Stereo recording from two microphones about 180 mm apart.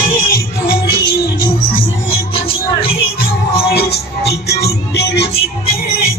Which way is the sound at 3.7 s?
60° left (ahead or behind).